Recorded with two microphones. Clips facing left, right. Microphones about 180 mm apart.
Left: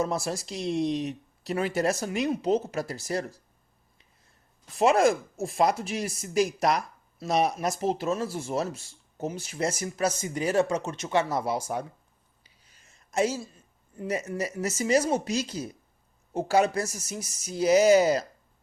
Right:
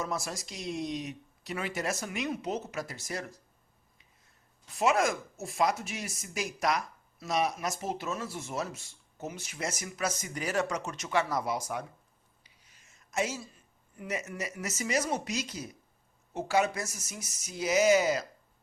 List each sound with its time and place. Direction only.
0.0 s speech: 30° left (ahead or behind)
4.8 s speech: 35° left (ahead or behind)
13.1 s a woman's voice: 35° left (ahead or behind)